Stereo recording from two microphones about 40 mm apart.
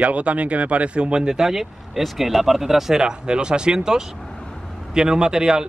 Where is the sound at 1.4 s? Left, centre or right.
Centre.